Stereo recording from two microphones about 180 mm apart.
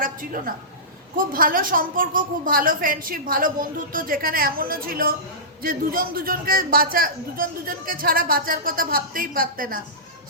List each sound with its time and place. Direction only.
0.0 s a woman's voice: 50° right (ahead or behind)